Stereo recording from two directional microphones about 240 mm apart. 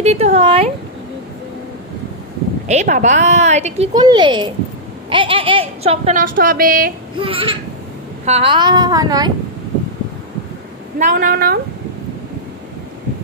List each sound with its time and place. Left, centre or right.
0.0 s a sound: right
2.7 s a woman's voice: right
7.2 s a woman's voice: right
11.0 s a woman's voice: right